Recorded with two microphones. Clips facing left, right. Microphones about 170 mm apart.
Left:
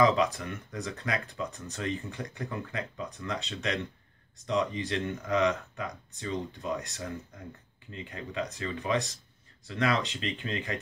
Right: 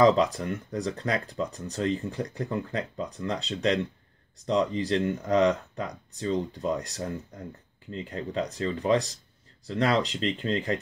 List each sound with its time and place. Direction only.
0.0 s speech: 35° right (ahead or behind)